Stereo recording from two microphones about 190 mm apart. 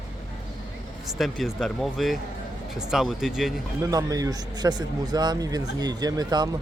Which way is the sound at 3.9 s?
20° right (ahead or behind).